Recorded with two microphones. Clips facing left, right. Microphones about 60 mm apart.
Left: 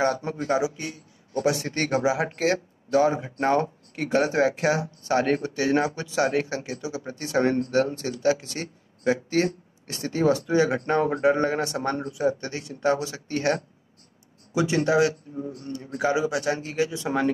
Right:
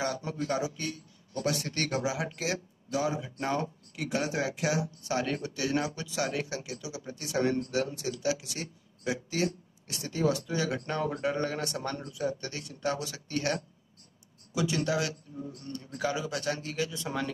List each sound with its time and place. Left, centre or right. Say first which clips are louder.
0.0 s speech: left 8 dB; left
0.6 s a man's voice: left 6 dB; centre